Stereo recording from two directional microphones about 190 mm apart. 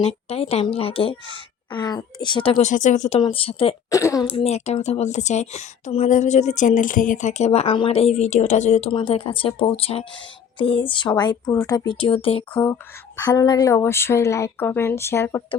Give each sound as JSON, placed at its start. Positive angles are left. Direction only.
{"t": 0.0, "sound": "speech", "side_deg": 30}
{"t": 3.2, "sound": "speech", "side_deg": 30}
{"t": 3.9, "sound": "speech", "side_deg": 15}
{"t": 4.3, "sound": "speech", "side_deg": 30}
{"t": 13.1, "sound": "speech", "side_deg": 20}